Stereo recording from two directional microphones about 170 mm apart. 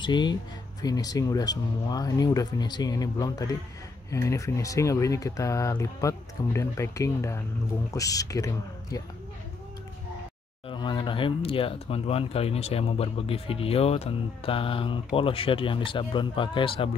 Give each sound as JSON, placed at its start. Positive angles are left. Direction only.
{"t": 0.0, "sound": "speech", "side_deg": 25}
{"t": 10.7, "sound": "speech", "side_deg": 25}